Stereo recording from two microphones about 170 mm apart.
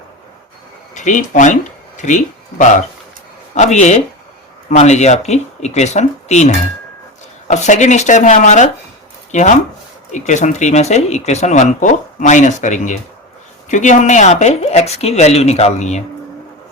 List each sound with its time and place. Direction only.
0.9 s speech: 45° left (ahead or behind)